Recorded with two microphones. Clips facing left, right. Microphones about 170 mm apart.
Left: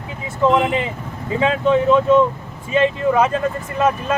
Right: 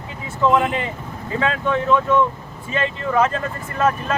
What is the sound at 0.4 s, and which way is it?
Speech, 20° left (ahead or behind).